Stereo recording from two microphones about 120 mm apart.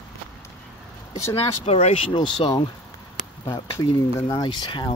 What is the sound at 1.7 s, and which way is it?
Speech, 55° left (ahead or behind).